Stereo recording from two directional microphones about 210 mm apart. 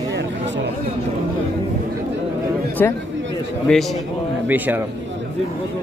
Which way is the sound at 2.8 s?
10° left (ahead or behind).